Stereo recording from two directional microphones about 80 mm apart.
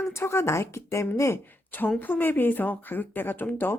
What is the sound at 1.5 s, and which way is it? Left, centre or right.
A woman's voice, left.